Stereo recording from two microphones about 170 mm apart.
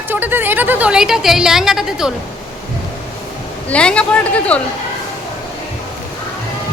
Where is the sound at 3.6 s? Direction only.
5° left (ahead or behind).